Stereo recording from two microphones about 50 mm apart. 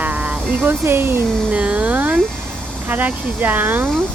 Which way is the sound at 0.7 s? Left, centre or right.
Right.